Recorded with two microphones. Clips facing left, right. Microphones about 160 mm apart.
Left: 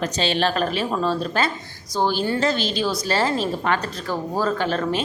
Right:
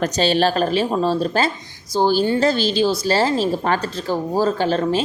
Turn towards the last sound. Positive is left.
turn(degrees=-30)  # may be behind; listen again after turning